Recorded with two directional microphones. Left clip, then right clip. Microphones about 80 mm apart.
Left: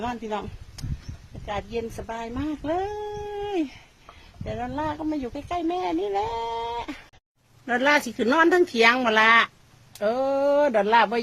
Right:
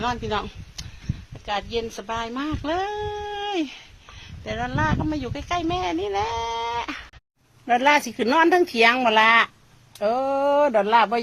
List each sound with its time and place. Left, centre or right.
0.1 s speech: right
1.5 s speech: centre
3.3 s dog: centre
4.4 s speech: centre
5.5 s speech: centre
8.2 s speech: centre
10.0 s speech: left